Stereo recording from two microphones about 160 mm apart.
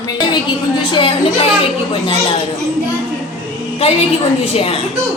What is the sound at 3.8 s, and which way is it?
Speech, 35° left (ahead or behind).